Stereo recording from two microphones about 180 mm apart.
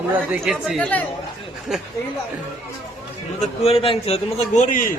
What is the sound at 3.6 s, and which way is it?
A man's voice, 30° left (ahead or behind).